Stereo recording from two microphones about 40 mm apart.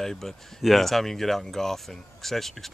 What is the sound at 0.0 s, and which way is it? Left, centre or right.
Speech, centre.